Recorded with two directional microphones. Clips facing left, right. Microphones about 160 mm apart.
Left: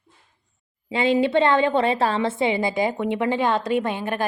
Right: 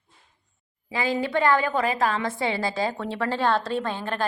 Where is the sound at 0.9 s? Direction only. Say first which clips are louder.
Left 6 dB; 25° left (ahead or behind).